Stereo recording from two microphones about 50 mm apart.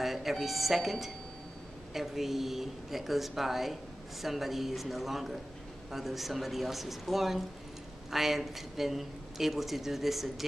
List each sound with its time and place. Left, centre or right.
0.0 s speech: centre